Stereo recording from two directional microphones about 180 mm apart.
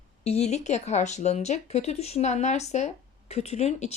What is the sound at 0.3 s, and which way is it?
Speech, 35° left (ahead or behind).